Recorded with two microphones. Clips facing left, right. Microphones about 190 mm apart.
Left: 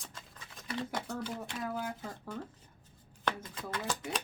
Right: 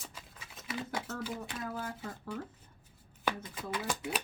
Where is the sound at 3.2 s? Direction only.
10° right (ahead or behind).